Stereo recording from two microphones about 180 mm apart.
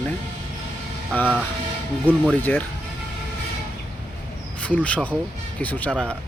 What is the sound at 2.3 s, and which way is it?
Speech, 10° left (ahead or behind).